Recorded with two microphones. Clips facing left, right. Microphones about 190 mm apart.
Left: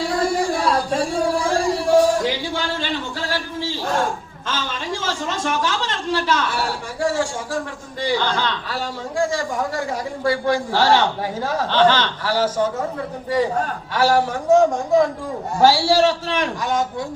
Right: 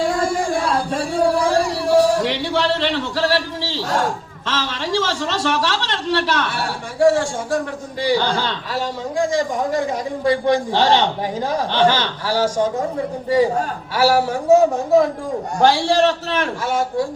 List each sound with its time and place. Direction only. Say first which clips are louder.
0.0 s a sound: right 1 dB; 50° right (ahead or behind); by 4.0 s 75° right (ahead or behind)
4.4 s a woman's voice: right 2 dB; 75° right (ahead or behind); by 7.3 s 60° right (ahead or behind)
8.3 s a man's voice: right 1 dB; 30° right (ahead or behind)
9.1 s a man's voice: right 2 dB; 20° right (ahead or behind)
13.9 s a man's voice: right 1 dB; 10° right (ahead or behind)
15.5 s a man's voice: even; 5° left (ahead or behind)